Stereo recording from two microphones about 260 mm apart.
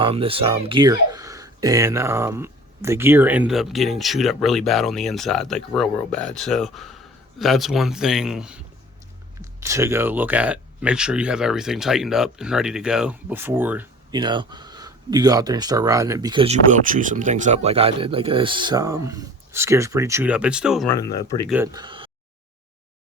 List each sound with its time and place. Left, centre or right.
0.0 s speech: right
16.9 s speech: right; by 20.9 s centre
20.9 s speech: centre
21.5 s speech: centre